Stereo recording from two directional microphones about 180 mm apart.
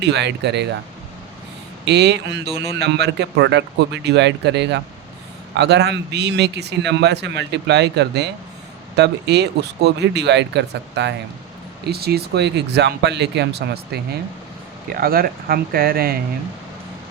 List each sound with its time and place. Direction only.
0.0 s a man's voice: 70° right (ahead or behind)
1.8 s a man's voice: 70° right (ahead or behind)
11.9 s a man's voice: 60° right (ahead or behind)